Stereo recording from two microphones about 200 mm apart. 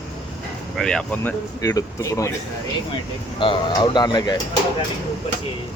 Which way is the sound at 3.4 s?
25° left (ahead or behind).